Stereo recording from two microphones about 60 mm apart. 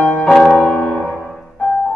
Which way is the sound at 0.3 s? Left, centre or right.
Centre.